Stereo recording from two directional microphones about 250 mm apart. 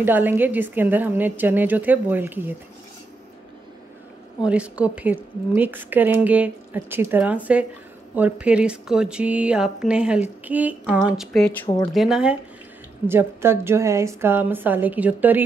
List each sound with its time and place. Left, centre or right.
0.0 s a woman's voice: centre
4.5 s a woman's voice: centre
11.6 s speech: centre
11.9 s a woman's voice: centre